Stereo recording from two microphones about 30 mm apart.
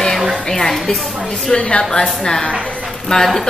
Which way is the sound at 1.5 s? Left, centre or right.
Left.